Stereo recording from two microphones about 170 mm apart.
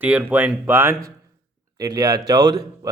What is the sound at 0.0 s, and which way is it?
Speech, 10° right (ahead or behind).